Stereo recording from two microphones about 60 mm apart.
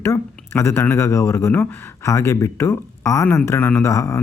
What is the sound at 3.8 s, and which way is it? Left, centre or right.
Speech, left.